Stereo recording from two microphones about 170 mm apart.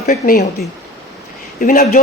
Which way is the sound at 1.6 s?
55° left (ahead or behind).